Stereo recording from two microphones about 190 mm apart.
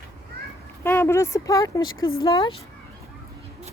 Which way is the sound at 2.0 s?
90° left.